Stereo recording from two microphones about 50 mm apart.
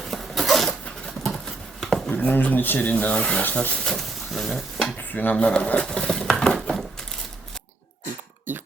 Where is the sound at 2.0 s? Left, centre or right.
Left.